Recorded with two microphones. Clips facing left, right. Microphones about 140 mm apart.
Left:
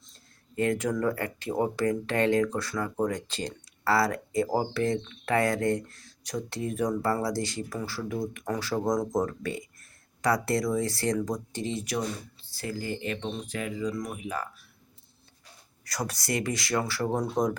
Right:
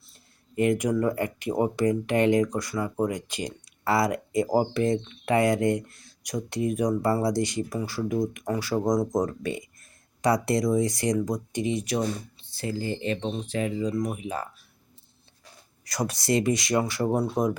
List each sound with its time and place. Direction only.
0.0 s speech: 15° right (ahead or behind)
15.8 s speech: 20° right (ahead or behind)